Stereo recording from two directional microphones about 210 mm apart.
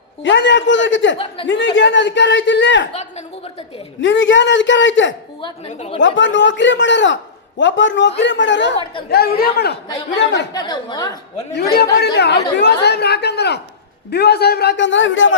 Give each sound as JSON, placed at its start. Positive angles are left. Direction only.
{"t": 0.2, "sound": "a man's voice", "side_deg": 60}
{"t": 2.9, "sound": "a man's voice", "side_deg": 30}
{"t": 4.0, "sound": "a man's voice", "side_deg": 65}
{"t": 5.4, "sound": "a woman's voice", "side_deg": 25}
{"t": 6.0, "sound": "a man's voice", "side_deg": 60}
{"t": 9.0, "sound": "a man's voice", "side_deg": 45}
{"t": 10.5, "sound": "a woman's voice", "side_deg": 20}
{"t": 11.5, "sound": "a man's voice", "side_deg": 50}